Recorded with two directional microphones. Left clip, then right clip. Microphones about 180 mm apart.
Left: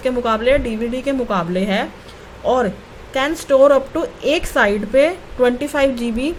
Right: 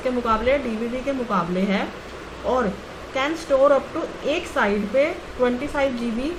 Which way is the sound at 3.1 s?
60° left (ahead or behind).